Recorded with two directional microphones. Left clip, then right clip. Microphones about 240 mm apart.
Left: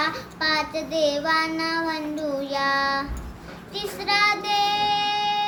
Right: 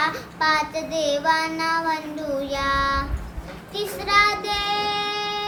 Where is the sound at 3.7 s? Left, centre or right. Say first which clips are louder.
Right 2 dB; centre.